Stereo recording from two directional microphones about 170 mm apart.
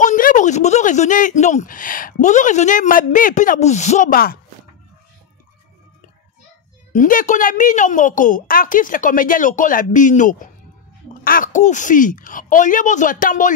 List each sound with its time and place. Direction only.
0.0 s speech: 50° left (ahead or behind)
6.9 s speech: 50° left (ahead or behind)